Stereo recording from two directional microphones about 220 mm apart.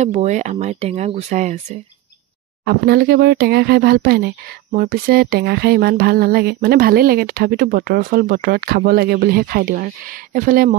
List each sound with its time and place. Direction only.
0.0 s speech: 30° right (ahead or behind)
2.6 s a sound: 45° right (ahead or behind)
10.3 s speech: 40° right (ahead or behind)